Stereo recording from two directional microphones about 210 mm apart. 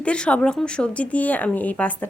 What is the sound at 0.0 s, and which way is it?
A woman's voice, 5° left (ahead or behind).